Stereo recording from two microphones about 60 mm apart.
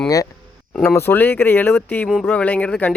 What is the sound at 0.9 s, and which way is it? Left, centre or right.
Speech, left.